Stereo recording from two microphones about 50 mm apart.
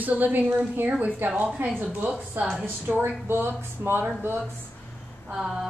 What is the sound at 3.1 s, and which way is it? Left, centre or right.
Speech, right.